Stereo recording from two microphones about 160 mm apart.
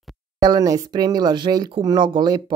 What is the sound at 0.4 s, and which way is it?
Speech, 20° right (ahead or behind).